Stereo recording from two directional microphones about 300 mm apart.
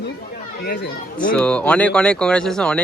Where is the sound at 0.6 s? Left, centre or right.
Left.